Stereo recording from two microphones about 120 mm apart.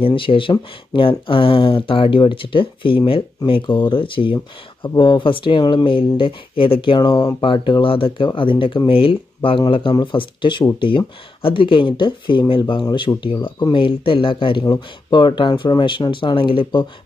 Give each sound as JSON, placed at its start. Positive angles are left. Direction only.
{"t": 0.0, "sound": "speech", "side_deg": 45}
{"t": 14.6, "sound": "speech", "side_deg": 35}